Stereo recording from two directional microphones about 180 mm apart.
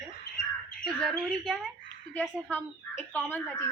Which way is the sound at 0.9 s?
Centre (ahead or behind).